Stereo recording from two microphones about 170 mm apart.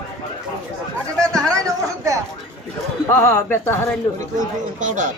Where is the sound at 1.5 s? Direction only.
20° right (ahead or behind).